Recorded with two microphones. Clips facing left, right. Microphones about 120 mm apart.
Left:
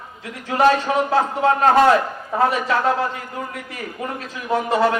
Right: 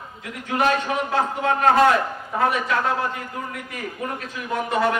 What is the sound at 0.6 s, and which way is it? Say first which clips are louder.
A man's voice: left 5 dB; 30° left (ahead or behind).